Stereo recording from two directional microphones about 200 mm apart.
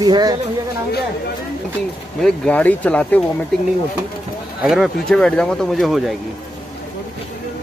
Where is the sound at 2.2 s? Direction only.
5° left (ahead or behind).